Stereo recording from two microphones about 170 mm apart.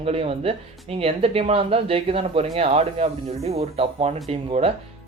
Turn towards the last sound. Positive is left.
turn(degrees=-35)  # may be behind; listen again after turning